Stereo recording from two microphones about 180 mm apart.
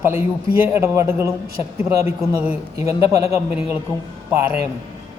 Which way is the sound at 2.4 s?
10° right (ahead or behind).